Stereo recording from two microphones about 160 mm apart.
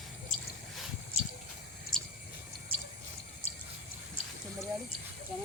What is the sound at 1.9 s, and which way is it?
Drip, 5° left (ahead or behind).